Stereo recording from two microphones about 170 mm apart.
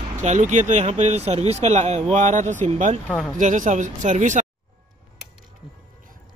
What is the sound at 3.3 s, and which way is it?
Speech, 50° right (ahead or behind).